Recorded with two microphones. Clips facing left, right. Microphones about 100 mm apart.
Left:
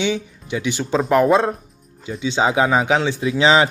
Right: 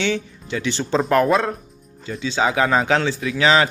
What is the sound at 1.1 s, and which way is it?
Speech, 20° left (ahead or behind).